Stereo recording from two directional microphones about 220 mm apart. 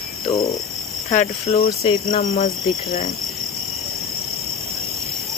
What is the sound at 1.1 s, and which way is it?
Cricket, 30° left (ahead or behind).